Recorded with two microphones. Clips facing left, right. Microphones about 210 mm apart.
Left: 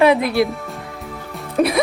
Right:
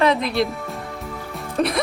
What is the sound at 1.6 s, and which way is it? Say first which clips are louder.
Music: left 4 dB; 5° left (ahead or behind).